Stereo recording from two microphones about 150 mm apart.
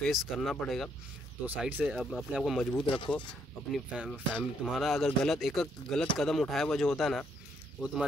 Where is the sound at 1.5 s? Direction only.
10° right (ahead or behind).